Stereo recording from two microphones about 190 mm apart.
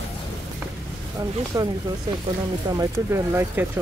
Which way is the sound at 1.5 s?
20° right (ahead or behind).